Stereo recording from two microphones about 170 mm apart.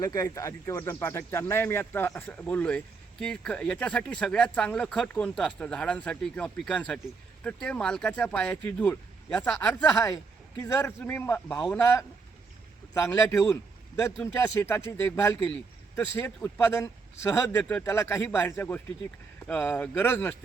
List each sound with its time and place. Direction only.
0.0 s speech: 20° left (ahead or behind)
10.6 s speech: 15° left (ahead or behind)